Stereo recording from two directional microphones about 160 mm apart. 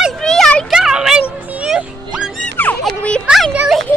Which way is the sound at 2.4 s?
10° left (ahead or behind).